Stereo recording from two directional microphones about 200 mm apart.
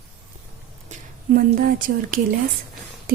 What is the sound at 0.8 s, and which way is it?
Speech, 45° right (ahead or behind).